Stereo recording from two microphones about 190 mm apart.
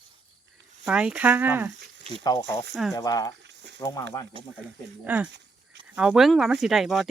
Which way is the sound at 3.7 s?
20° left (ahead or behind).